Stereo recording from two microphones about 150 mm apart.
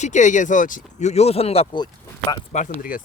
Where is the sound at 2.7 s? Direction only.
70° left (ahead or behind).